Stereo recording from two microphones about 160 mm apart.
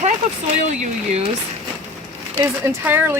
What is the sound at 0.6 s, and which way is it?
Speech, 45° right (ahead or behind).